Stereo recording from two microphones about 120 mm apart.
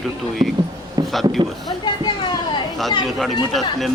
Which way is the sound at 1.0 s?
30° right (ahead or behind).